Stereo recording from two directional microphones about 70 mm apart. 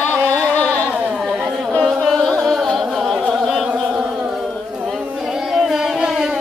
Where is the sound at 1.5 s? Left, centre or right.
Centre.